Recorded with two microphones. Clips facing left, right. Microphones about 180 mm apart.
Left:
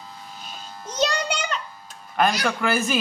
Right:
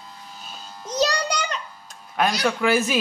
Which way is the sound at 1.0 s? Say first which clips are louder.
Right 1 dB; 35° right (ahead or behind).